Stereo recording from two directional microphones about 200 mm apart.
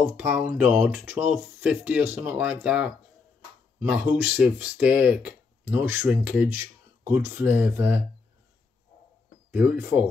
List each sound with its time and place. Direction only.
0.2 s speech: 10° right (ahead or behind)
9.5 s speech: 10° right (ahead or behind)